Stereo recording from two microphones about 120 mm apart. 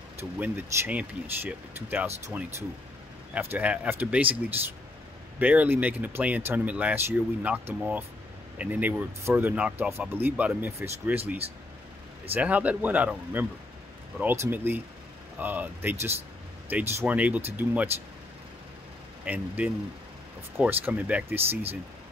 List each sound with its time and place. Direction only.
0.2 s speech: 15° right (ahead or behind)
12.4 s speech: 10° right (ahead or behind)
19.2 s speech: 10° right (ahead or behind)